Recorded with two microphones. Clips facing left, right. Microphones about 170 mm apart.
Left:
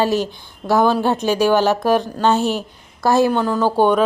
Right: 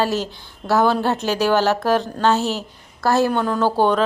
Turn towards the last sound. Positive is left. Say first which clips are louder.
# left 2 dB
turn(degrees=15)  # may be behind; listen again after turning